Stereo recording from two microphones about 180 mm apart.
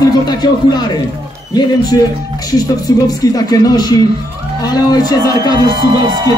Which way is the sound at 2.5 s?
20° left (ahead or behind).